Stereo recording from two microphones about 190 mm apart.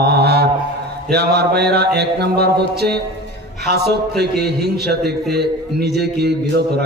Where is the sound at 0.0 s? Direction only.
60° right (ahead or behind).